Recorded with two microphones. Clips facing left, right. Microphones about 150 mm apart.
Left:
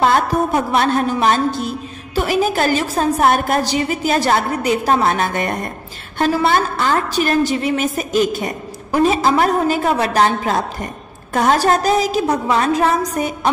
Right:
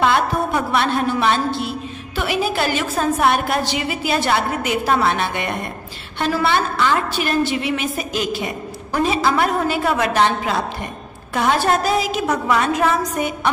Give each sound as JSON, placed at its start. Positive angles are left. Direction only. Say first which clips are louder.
{"t": 0.0, "sound": "a woman's voice", "louder": "left 2 dB", "side_deg": 40}